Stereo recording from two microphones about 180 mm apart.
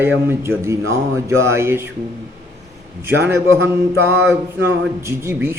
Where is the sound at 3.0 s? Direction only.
15° right (ahead or behind).